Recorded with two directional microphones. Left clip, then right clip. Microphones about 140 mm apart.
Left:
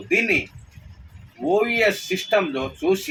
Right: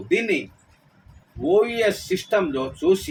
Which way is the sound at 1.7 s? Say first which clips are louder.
Left 2 dB; 30° right (ahead or behind).